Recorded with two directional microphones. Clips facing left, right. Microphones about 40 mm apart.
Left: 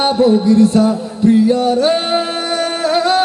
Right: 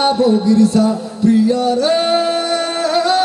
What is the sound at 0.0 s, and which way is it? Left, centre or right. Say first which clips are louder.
Music: left 1 dB; left.